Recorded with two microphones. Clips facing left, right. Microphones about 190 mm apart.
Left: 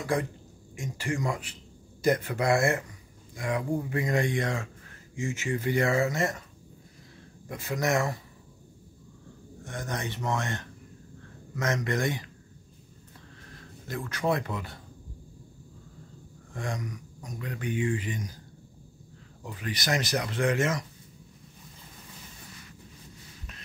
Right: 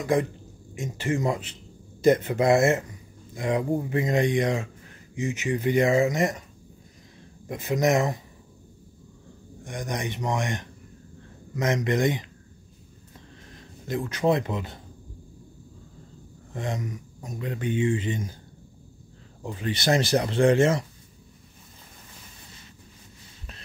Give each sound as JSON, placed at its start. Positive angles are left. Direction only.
{"t": 0.0, "sound": "speech", "side_deg": -20}
{"t": 7.4, "sound": "speech", "side_deg": -20}
{"t": 9.6, "sound": "a man's voice", "side_deg": -15}
{"t": 13.5, "sound": "speech", "side_deg": -20}
{"t": 16.5, "sound": "speech", "side_deg": -25}
{"t": 19.4, "sound": "speech", "side_deg": -25}